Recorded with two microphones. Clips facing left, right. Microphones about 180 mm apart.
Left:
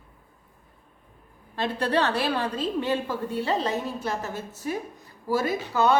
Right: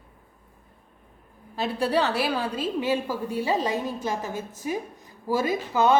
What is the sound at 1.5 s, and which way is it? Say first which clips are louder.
A woman's voice: right 1 dB; 5° right (ahead or behind).